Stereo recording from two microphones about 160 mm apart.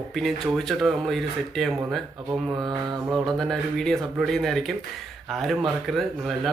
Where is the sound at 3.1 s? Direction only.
Centre (ahead or behind).